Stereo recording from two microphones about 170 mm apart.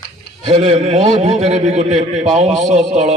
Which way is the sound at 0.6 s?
40° right (ahead or behind).